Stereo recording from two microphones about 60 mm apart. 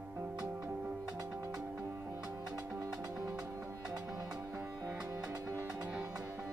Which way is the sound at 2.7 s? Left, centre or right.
Right.